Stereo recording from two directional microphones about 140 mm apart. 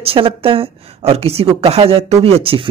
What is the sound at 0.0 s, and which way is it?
A woman's voice, 40° right (ahead or behind).